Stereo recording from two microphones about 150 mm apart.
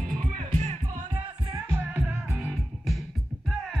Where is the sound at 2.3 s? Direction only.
5° right (ahead or behind).